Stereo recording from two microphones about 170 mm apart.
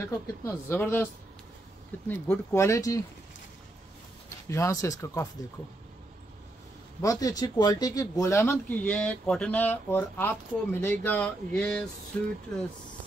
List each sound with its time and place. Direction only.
0.0 s speech: 15° left (ahead or behind)
2.0 s speech: 15° left (ahead or behind)
4.5 s speech: 15° left (ahead or behind)
7.0 s speech: 20° left (ahead or behind)